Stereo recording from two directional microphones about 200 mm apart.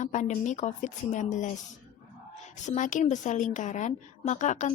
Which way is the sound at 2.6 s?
40° left (ahead or behind).